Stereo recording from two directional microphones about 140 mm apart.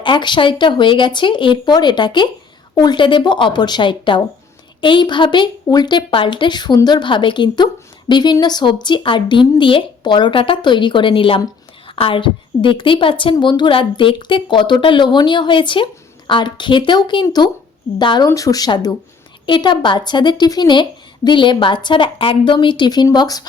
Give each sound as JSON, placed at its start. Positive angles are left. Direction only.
{"t": 0.0, "sound": "a woman's voice", "side_deg": 35}